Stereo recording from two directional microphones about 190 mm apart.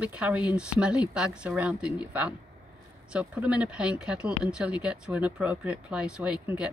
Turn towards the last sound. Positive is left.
turn(degrees=-5)  # may be behind; listen again after turning